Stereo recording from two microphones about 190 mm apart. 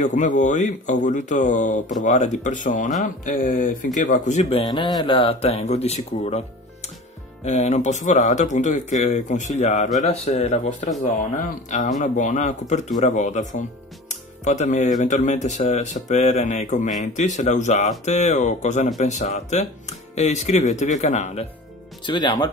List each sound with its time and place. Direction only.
0.0 s speech: 40° left (ahead or behind)
22.0 s speech: 25° left (ahead or behind)